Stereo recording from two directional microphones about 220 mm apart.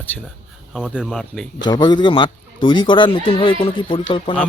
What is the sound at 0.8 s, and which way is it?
Speech, 5° right (ahead or behind).